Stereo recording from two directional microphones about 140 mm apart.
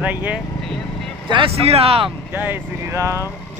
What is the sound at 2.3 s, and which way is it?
Speech, 15° right (ahead or behind).